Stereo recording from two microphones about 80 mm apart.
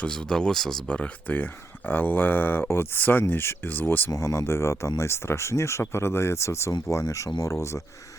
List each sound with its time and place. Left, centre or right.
0.0 s speech: centre; by 4.1 s left
4.1 s speech: left